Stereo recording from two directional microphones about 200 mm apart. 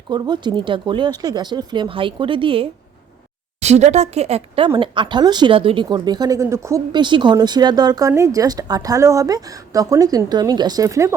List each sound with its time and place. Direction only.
0.1 s a woman's voice: 20° right (ahead or behind)